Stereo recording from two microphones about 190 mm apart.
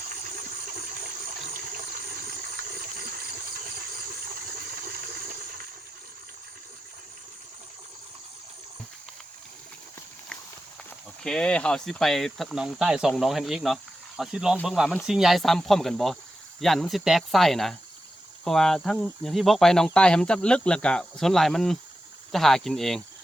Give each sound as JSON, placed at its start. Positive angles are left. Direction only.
{"t": 11.2, "sound": "speech", "side_deg": 5}